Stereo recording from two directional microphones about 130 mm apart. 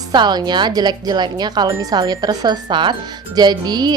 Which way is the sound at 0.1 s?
35° right (ahead or behind).